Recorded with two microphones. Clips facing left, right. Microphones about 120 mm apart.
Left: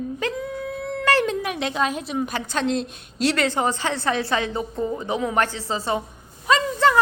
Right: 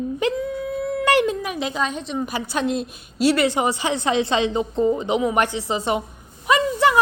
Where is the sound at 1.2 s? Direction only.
Centre (ahead or behind).